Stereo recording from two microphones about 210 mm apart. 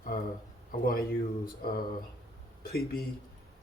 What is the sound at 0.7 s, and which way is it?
Speech, 45° left (ahead or behind).